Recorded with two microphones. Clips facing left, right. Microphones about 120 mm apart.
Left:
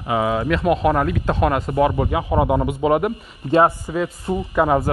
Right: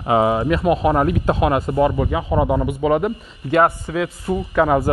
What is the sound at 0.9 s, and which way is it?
Speech, 20° right (ahead or behind).